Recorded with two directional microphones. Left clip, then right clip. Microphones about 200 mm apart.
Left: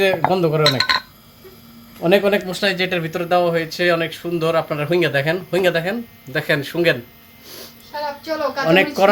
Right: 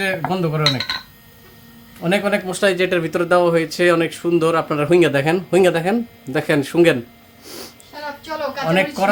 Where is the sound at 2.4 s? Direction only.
30° right (ahead or behind).